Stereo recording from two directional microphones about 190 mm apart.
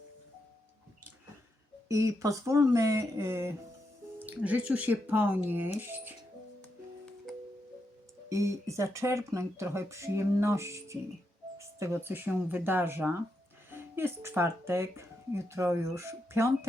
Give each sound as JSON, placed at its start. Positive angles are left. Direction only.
{"t": 1.9, "sound": "speech", "side_deg": -15}
{"t": 8.3, "sound": "speech", "side_deg": -15}